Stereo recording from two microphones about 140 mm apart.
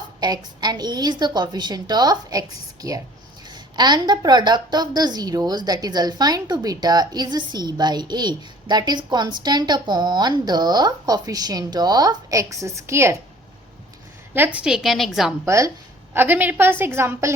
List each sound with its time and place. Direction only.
0.2 s a woman's voice: 30° right (ahead or behind)
14.3 s a woman's voice: 10° right (ahead or behind)
15.4 s a woman's voice: 20° right (ahead or behind)